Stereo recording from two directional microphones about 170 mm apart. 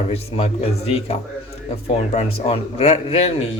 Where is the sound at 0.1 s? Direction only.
35° left (ahead or behind).